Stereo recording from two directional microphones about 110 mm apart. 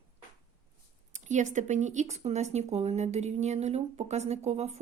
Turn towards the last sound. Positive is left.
turn(degrees=-80)